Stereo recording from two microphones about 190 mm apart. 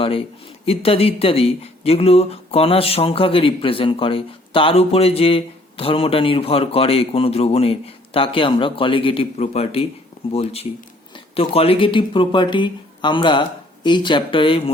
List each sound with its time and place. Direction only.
0.0 s speech: 30° left (ahead or behind)